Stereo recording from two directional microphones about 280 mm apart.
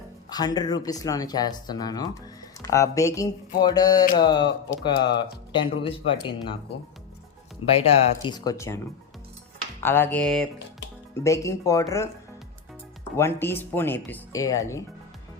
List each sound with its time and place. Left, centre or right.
0.3 s speech: centre
7.7 s speech: left
9.8 s speech: centre
13.1 s speech: centre